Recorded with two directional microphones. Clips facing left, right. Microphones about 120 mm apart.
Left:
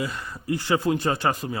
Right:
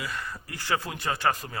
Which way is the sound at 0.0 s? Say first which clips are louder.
Left 5 dB; 20° left (ahead or behind).